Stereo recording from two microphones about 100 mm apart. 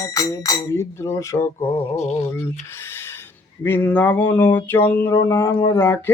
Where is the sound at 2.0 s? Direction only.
90° left.